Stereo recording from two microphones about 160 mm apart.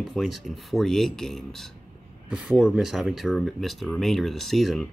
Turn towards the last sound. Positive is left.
turn(degrees=0)  # may be behind; listen again after turning